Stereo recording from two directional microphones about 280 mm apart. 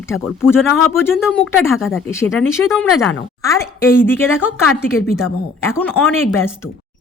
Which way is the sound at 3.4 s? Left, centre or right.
Centre.